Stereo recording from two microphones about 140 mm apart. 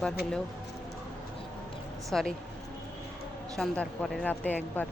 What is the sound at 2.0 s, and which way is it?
Speech, centre (ahead or behind).